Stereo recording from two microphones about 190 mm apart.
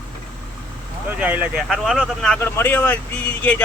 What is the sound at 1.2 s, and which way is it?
Speech, 10° right (ahead or behind).